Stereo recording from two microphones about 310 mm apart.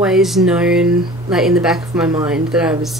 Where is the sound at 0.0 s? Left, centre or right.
Centre.